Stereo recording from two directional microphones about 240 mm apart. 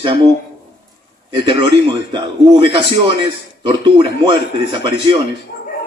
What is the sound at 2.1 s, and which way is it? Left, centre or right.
A man's voice, right.